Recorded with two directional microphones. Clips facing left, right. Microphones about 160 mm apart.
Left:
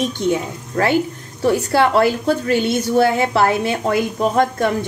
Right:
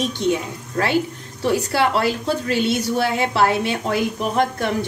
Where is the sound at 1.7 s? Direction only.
50° left (ahead or behind).